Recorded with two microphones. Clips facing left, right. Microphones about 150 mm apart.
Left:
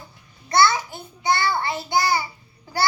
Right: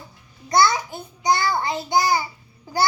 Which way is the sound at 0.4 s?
20° right (ahead or behind).